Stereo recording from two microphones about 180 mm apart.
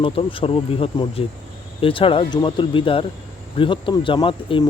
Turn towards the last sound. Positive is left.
turn(degrees=25)  # may be behind; listen again after turning